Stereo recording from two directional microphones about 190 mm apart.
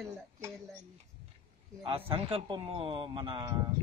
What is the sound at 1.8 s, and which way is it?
A man's voice, 30° right (ahead or behind).